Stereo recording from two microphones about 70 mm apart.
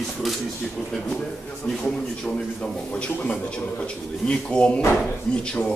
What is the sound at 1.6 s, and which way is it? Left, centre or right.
A man's voice, left.